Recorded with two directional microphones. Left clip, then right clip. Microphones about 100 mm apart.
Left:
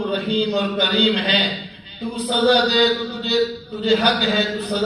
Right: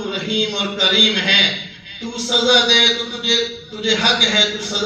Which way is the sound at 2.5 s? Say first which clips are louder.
Right 4 dB; 30° left (ahead or behind).